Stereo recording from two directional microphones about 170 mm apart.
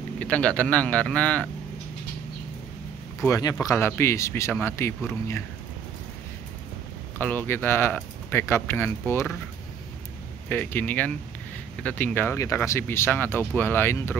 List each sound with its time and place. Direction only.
0.2 s speech: 10° left (ahead or behind)
3.3 s speech: 20° left (ahead or behind)
7.2 s speech: 10° left (ahead or behind)
10.5 s speech: 10° left (ahead or behind)